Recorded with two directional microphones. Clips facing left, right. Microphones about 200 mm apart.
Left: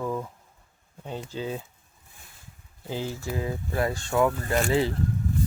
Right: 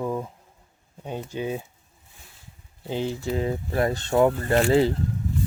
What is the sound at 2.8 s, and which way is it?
Speech, 20° right (ahead or behind).